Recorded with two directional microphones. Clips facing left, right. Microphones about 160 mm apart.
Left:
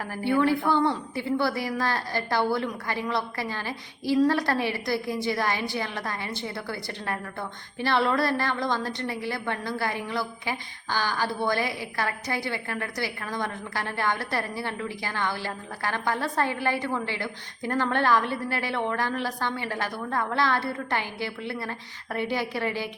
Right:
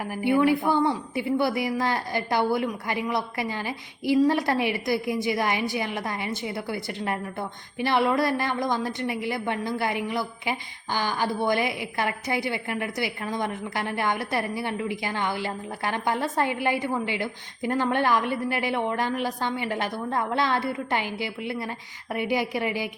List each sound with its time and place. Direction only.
0.0 s a woman's voice: 15° right (ahead or behind)